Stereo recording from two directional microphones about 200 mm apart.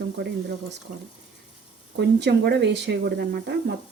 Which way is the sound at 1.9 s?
55° right (ahead or behind).